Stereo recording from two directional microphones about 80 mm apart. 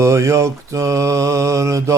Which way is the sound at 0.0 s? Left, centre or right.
Right.